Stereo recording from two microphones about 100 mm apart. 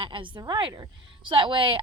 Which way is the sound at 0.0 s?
60° right (ahead or behind).